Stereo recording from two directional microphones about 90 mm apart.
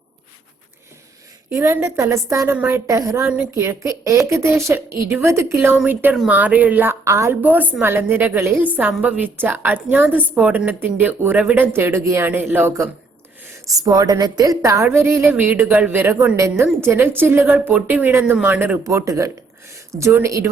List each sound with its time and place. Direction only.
1.5 s a woman's voice: 30° right (ahead or behind)
7.0 s a woman's voice: 30° right (ahead or behind)
7.4 s a woman's voice: 20° right (ahead or behind)
13.7 s a woman's voice: 40° right (ahead or behind)
14.9 s a woman's voice: 25° right (ahead or behind)
18.9 s a woman's voice: 35° right (ahead or behind)